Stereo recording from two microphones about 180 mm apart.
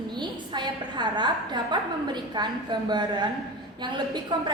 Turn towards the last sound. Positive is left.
turn(degrees=-25)  # may be behind; listen again after turning